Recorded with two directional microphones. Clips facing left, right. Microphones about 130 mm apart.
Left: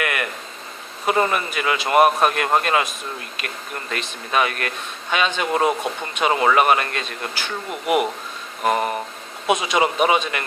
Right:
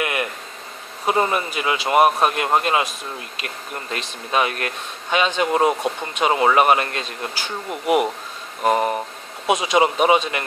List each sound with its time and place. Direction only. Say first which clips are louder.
0.0 s a sound: right 1 dB; 25° right (ahead or behind)
1.0 s speech: even; 20° right (ahead or behind)
8.6 s speech: right 2 dB; 25° right (ahead or behind)